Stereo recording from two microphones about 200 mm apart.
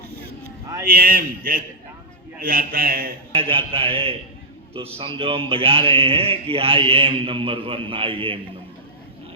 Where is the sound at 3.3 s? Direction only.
30° right (ahead or behind).